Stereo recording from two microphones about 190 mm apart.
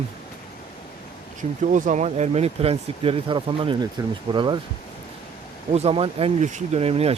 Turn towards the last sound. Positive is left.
turn(degrees=-30)  # may be behind; listen again after turning